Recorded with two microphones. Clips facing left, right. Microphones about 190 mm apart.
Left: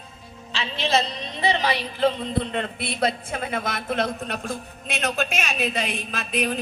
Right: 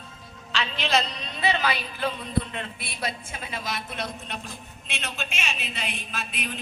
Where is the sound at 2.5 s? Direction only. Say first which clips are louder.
Left 9 dB; 50° left (ahead or behind).